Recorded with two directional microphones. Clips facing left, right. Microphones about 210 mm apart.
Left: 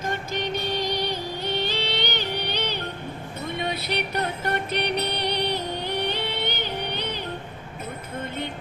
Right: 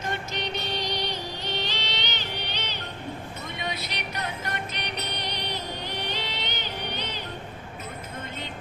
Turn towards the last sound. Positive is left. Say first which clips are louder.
# left 4 dB
turn(degrees=55)  # may be behind; listen again after turning